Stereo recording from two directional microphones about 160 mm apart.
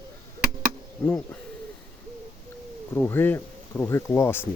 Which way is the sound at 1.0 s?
10° left (ahead or behind).